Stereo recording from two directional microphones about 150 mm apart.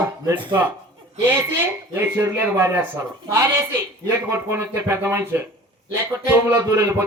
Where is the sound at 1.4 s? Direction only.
15° right (ahead or behind).